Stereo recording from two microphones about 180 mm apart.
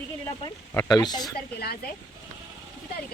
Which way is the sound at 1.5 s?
60° left (ahead or behind).